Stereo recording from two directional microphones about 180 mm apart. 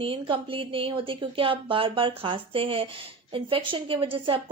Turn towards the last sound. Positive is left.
turn(degrees=-30)  # may be behind; listen again after turning